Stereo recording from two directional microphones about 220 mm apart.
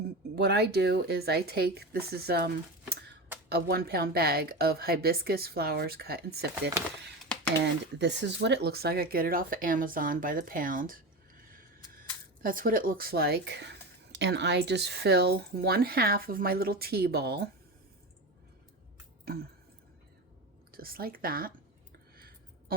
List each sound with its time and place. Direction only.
0.3 s speech: 50° right (ahead or behind)
3.5 s speech: 45° right (ahead or behind)
7.6 s speech: 50° right (ahead or behind)
19.2 s a sound: 45° right (ahead or behind)
20.7 s speech: 40° right (ahead or behind)